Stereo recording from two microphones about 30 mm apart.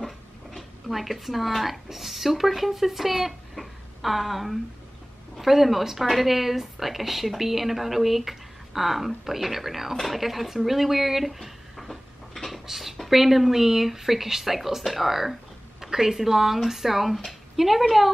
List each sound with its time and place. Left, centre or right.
0.0 s dog: centre
0.8 s a woman's voice: centre
12.4 s beatboxing: centre
12.6 s a sound: centre
13.1 s a woman's voice: centre